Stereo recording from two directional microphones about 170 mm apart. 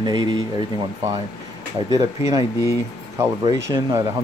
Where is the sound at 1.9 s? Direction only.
20° right (ahead or behind).